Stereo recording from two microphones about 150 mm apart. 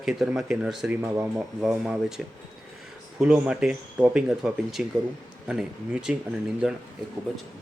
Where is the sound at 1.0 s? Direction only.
15° right (ahead or behind).